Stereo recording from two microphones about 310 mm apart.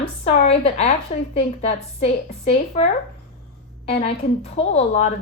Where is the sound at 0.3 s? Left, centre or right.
Centre.